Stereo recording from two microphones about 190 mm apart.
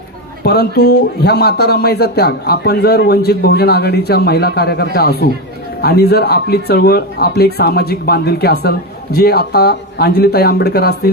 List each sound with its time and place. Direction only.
0.4 s a man's voice: 55° left (ahead or behind)